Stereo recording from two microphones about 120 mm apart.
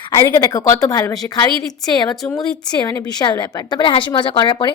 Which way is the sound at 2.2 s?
5° left (ahead or behind).